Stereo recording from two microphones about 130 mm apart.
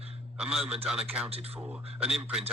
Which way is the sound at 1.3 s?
50° right (ahead or behind).